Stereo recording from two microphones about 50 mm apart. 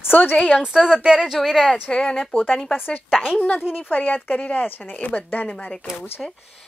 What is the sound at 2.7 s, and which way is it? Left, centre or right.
Speech, left.